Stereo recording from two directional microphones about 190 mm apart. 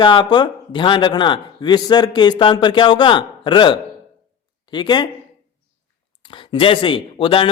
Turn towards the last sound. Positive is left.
turn(degrees=30)  # may be behind; listen again after turning